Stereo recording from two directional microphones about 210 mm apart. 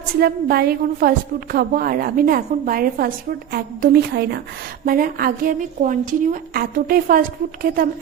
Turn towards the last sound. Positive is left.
turn(degrees=-40)  # may be behind; listen again after turning